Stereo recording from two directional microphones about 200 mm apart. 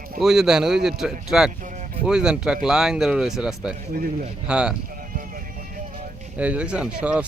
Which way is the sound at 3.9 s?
45° right (ahead or behind).